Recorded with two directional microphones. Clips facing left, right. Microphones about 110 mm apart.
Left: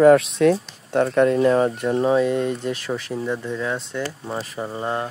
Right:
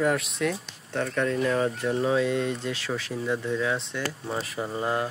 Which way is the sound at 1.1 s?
40° left (ahead or behind).